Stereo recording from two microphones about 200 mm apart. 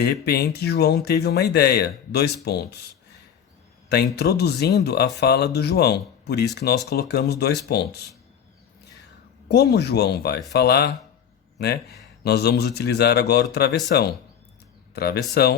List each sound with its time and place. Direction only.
0.0 s speech: 55° left (ahead or behind)
3.8 s speech: 55° left (ahead or behind)
9.5 s speech: 55° left (ahead or behind)